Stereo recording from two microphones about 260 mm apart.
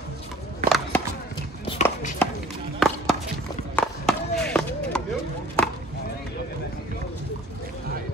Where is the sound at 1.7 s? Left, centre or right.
Left.